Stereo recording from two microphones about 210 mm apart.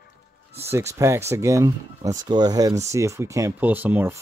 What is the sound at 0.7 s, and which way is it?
Speech, 15° right (ahead or behind).